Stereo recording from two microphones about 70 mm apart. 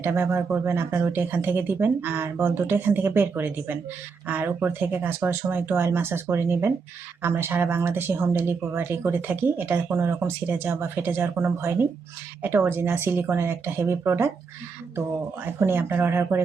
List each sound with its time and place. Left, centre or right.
0.0 s speech: right
15.4 s speech: right